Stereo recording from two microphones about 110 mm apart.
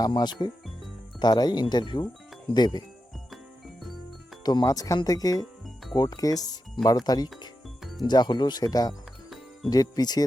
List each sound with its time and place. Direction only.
0.0 s speech: 40° left (ahead or behind)
4.4 s speech: 35° left (ahead or behind)